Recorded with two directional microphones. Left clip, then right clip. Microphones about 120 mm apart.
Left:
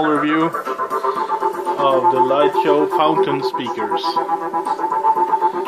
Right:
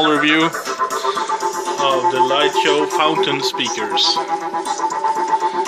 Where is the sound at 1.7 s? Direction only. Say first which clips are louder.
Left 1 dB; 35° left (ahead or behind).